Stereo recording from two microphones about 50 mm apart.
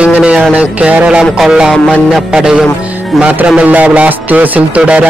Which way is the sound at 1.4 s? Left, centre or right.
Centre.